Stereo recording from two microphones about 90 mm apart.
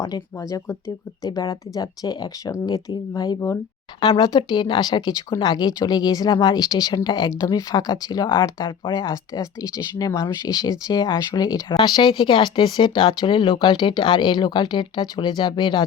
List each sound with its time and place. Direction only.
0.0 s speech: 40° left (ahead or behind)
4.0 s speech: 65° left (ahead or behind); by 8.3 s 45° left (ahead or behind)
8.5 s speech: 55° left (ahead or behind)
11.8 s speech: 65° left (ahead or behind)